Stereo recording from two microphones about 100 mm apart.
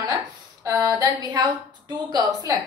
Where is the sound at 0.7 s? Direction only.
35° right (ahead or behind).